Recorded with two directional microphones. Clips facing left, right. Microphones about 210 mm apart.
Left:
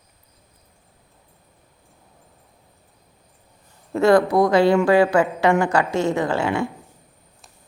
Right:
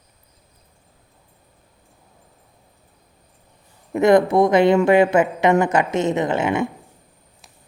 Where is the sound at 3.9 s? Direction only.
20° right (ahead or behind).